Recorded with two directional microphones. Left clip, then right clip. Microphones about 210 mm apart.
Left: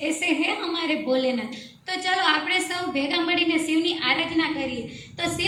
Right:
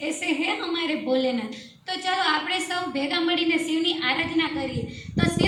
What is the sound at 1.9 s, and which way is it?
A woman's voice, 5° right (ahead or behind).